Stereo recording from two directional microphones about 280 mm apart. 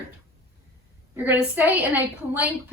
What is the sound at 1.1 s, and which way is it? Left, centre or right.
A woman's voice, centre.